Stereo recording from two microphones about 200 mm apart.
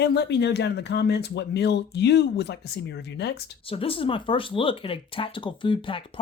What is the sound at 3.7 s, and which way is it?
Speech, 30° left (ahead or behind).